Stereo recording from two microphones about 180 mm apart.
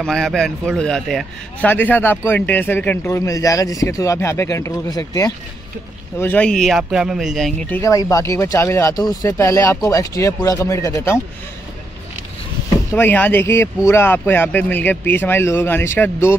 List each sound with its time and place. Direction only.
0.0 s a man's voice: centre (ahead or behind)
7.6 s a man's voice: 15° left (ahead or behind)
12.9 s a man's voice: 10° left (ahead or behind)